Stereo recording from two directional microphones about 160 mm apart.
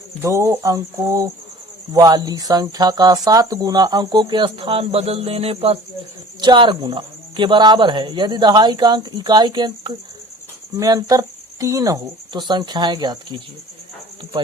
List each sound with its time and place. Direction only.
0.2 s speech: 15° right (ahead or behind)